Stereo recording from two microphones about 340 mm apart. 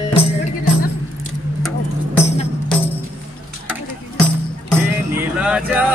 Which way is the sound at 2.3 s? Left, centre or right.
Centre.